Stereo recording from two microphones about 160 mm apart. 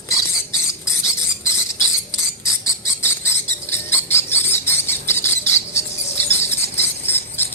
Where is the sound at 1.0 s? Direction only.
15° left (ahead or behind).